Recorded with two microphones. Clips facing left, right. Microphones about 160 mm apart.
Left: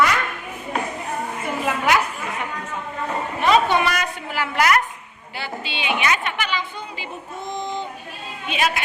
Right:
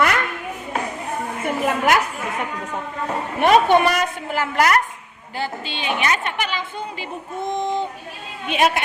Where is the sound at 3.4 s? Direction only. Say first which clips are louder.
Right 4 dB; 55° right (ahead or behind).